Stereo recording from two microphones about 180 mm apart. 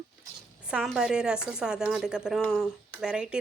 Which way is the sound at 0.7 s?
Centre (ahead or behind).